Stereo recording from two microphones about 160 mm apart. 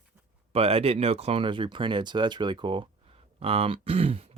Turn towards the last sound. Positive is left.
turn(degrees=-35)  # may be behind; listen again after turning